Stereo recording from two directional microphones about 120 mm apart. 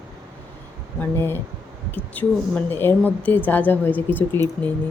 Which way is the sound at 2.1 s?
15° left (ahead or behind).